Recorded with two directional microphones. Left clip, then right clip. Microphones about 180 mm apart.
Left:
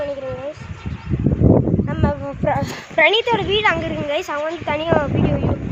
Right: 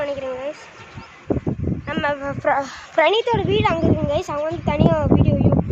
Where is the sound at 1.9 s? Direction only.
20° right (ahead or behind).